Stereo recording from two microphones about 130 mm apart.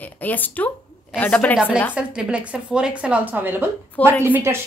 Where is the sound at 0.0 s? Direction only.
15° left (ahead or behind).